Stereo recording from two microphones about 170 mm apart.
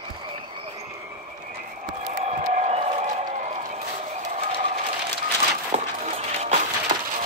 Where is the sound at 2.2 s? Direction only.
40° right (ahead or behind).